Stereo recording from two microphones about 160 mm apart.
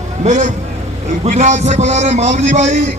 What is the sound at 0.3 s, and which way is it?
A man's voice, 50° right (ahead or behind).